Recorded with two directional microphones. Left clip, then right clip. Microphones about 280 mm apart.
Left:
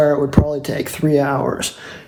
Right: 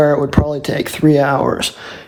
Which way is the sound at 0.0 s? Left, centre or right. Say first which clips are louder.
Right 2 dB; right.